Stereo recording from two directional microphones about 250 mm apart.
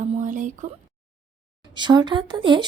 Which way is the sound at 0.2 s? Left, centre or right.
Right.